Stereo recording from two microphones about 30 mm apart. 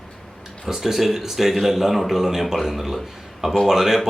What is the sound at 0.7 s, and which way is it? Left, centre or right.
A man's voice, centre.